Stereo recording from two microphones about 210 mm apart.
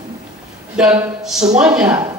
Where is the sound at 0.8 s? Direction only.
5° right (ahead or behind).